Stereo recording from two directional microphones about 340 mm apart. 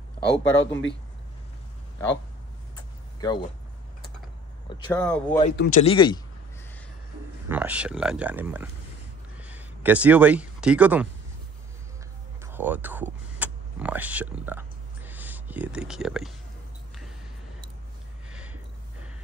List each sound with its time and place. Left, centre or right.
0.4 s speech: left
2.7 s vehicle: centre
4.6 s speech: centre
4.9 s speech: centre
5.4 s speech: left
7.4 s speech: centre
12.5 s power windows: centre
18.3 s a sound: centre